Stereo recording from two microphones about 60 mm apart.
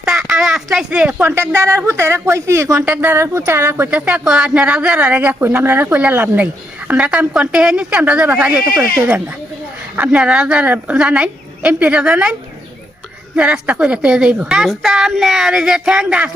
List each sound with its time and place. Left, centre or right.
0.0 s a sound: centre
0.9 s speech: right
1.5 s speech: right
3.0 s speech: right
3.9 s a woman's voice: centre
4.4 s speech: right
9.9 s a woman's voice: right
14.7 s a woman's voice: centre